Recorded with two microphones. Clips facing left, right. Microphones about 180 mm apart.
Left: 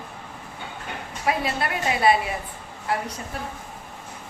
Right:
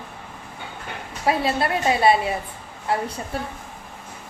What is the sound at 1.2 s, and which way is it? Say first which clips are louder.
A woman's voice: right 4 dB; 30° right (ahead or behind).